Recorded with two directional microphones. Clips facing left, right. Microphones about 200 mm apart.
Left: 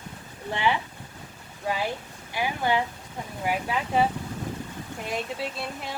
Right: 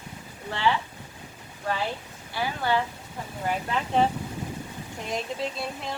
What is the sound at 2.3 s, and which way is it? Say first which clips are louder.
Speech: left 1 dB; 15° left (ahead or behind).